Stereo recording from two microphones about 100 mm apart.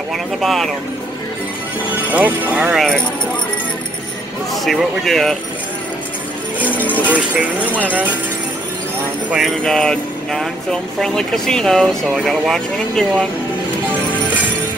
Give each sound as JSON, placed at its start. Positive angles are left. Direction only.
{"t": 0.4, "sound": "speech", "side_deg": 0}
{"t": 2.0, "sound": "speech", "side_deg": -15}
{"t": 4.6, "sound": "speech", "side_deg": 0}
{"t": 7.0, "sound": "speech", "side_deg": -15}
{"t": 9.6, "sound": "speech", "side_deg": 5}